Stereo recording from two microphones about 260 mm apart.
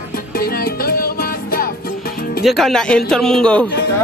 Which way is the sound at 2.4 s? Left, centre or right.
Centre.